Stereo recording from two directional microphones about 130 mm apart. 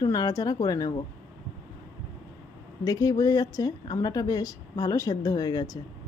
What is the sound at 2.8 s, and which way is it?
Speech, 25° left (ahead or behind).